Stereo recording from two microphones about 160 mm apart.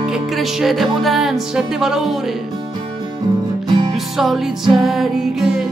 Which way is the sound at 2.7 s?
25° right (ahead or behind).